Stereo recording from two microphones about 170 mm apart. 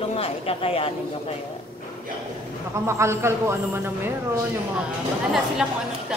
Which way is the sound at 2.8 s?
15° right (ahead or behind).